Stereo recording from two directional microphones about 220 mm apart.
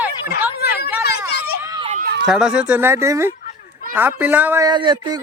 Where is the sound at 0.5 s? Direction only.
45° left (ahead or behind).